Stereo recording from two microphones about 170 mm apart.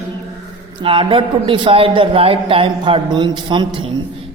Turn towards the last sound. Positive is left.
turn(degrees=-30)  # may be behind; listen again after turning